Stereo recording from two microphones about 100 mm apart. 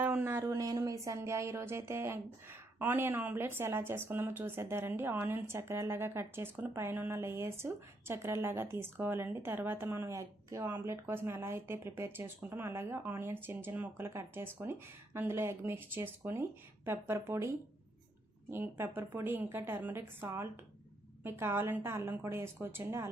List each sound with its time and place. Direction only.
0.0 s a sound: 15° right (ahead or behind)
0.3 s speech: 30° right (ahead or behind)
18.5 s speech: 20° right (ahead or behind)